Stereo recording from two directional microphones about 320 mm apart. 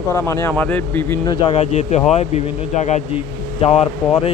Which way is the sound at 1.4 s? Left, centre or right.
Centre.